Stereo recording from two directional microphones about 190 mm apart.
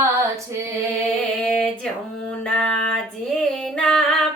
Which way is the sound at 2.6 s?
5° left (ahead or behind).